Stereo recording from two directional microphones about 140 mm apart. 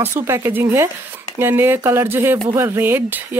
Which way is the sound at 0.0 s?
15° right (ahead or behind).